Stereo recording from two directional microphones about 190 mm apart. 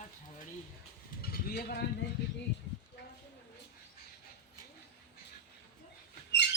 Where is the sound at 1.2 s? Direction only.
55° left (ahead or behind).